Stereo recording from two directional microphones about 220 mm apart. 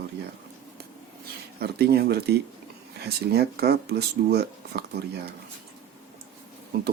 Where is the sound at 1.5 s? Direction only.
45° right (ahead or behind).